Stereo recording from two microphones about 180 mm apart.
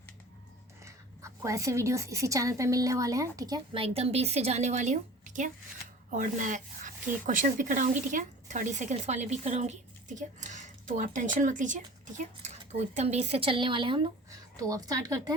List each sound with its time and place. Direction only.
0.9 s speech: 15° right (ahead or behind)
3.8 s a woman's voice: 35° right (ahead or behind); by 15.2 s 20° right (ahead or behind)